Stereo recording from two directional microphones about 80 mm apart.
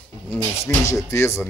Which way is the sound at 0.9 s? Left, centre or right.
Left.